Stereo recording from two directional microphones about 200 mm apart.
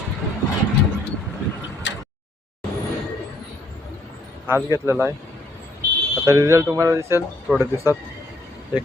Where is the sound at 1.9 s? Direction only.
65° left (ahead or behind).